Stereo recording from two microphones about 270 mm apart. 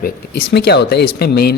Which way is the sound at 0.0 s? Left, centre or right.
Left.